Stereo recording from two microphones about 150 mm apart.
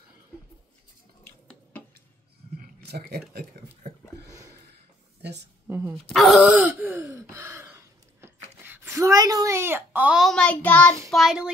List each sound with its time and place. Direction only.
2.9 s speech: 90° right
5.7 s a woman's voice: 15° right (ahead or behind)
6.0 s speech: centre (ahead or behind)
6.5 s sigh: 10° right (ahead or behind)
8.6 s a woman's voice: 15° right (ahead or behind); by 11.0 s 10° left (ahead or behind)
11.1 s speech: centre (ahead or behind)